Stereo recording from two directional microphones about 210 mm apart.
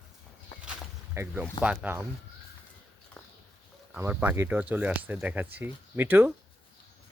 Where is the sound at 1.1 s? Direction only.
10° right (ahead or behind).